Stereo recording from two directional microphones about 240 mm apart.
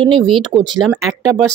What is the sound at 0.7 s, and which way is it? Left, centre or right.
Speech, centre.